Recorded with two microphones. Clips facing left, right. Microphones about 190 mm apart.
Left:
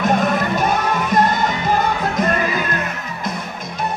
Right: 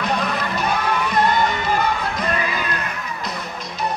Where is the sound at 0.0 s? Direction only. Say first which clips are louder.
Left 6 dB; 45° left (ahead or behind).